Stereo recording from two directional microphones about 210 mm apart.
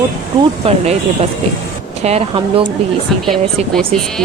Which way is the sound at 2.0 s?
30° right (ahead or behind).